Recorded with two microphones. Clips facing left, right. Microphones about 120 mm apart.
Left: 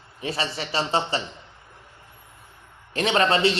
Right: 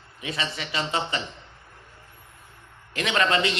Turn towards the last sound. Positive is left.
turn(degrees=30)  # may be behind; listen again after turning